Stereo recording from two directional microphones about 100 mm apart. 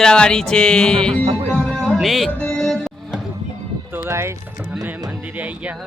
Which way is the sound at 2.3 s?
10° left (ahead or behind).